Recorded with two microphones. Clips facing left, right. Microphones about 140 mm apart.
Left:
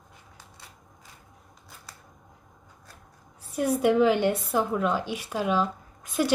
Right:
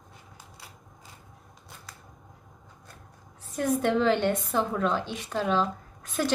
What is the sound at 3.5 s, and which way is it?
A woman's voice, 10° left (ahead or behind).